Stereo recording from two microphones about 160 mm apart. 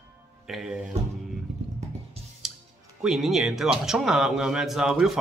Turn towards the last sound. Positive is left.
turn(degrees=-5)  # may be behind; listen again after turning